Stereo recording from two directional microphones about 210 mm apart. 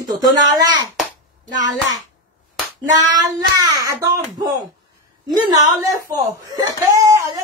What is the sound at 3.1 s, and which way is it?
Child singing, 15° right (ahead or behind).